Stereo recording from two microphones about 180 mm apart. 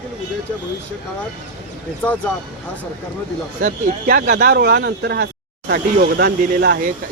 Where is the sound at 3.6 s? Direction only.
50° right (ahead or behind).